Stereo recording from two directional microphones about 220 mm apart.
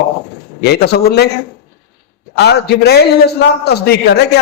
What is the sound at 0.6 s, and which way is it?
Speech, 50° left (ahead or behind).